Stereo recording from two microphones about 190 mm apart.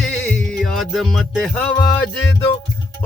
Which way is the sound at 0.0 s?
5° left (ahead or behind).